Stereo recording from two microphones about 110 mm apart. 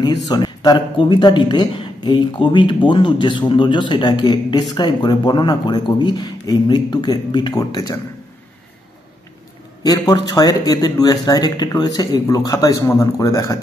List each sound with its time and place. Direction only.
0.0 s speech: 40° left (ahead or behind)
9.8 s speech: 35° left (ahead or behind)